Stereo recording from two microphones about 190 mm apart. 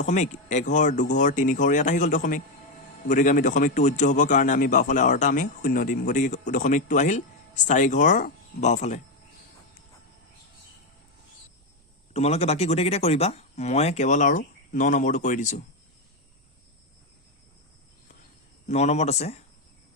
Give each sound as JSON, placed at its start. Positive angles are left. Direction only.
{"t": 0.0, "sound": "a man's voice", "side_deg": 40}
{"t": 12.1, "sound": "a man's voice", "side_deg": 35}
{"t": 18.7, "sound": "a man's voice", "side_deg": 35}